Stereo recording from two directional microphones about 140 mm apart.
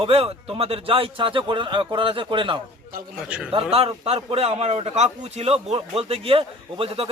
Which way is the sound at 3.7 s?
45° right (ahead or behind).